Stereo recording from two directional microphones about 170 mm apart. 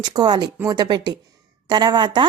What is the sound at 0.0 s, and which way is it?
A woman's voice, 25° right (ahead or behind).